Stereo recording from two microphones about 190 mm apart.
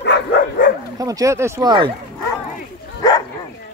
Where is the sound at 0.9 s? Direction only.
20° right (ahead or behind).